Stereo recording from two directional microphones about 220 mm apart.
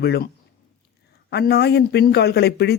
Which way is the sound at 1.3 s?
50° left (ahead or behind).